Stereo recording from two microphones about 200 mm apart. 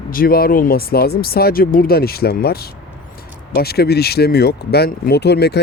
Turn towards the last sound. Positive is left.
turn(degrees=55)  # may be behind; listen again after turning